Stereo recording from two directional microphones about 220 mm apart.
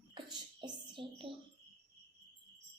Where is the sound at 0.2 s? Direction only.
20° right (ahead or behind).